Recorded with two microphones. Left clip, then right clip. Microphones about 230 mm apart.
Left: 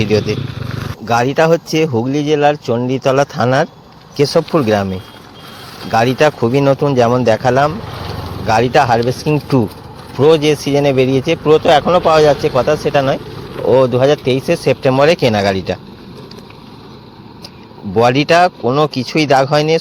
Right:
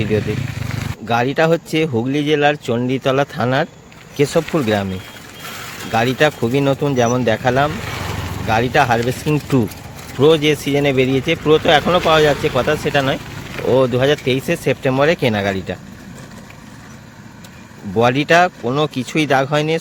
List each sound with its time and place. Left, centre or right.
0.3 s a sound: right
1.0 s speech: centre
6.1 s speech: centre
17.9 s speech: centre